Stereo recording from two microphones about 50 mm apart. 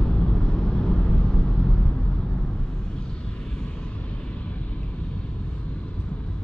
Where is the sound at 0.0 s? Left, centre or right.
Centre.